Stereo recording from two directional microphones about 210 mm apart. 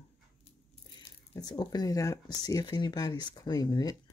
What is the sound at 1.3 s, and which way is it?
Speech, 20° left (ahead or behind).